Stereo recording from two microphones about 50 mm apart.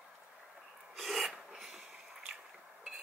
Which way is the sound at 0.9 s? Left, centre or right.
Centre.